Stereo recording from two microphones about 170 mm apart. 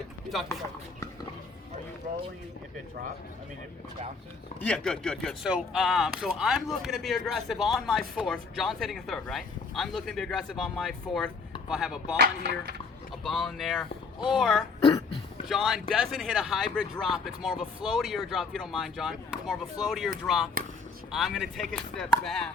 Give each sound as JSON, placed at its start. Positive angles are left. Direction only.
{"t": 2.0, "sound": "speech", "side_deg": -55}
{"t": 4.6, "sound": "speech", "side_deg": 5}
{"t": 12.1, "sound": "music", "side_deg": -75}
{"t": 13.2, "sound": "speech", "side_deg": 0}